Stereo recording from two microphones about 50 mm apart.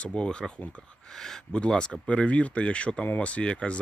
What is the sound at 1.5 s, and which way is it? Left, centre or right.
Speech, centre.